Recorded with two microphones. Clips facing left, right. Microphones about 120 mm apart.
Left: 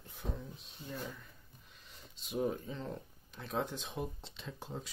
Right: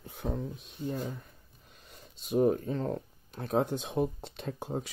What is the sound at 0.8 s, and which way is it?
Speech, 40° right (ahead or behind).